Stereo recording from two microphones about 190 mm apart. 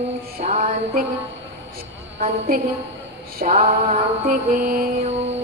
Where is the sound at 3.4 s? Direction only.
40° right (ahead or behind).